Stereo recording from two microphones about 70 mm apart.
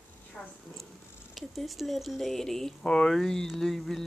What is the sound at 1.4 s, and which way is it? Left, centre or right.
Speech, centre.